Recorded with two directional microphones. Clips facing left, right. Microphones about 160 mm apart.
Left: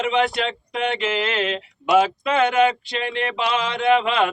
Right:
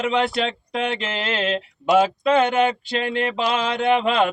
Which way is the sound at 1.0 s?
30° right (ahead or behind).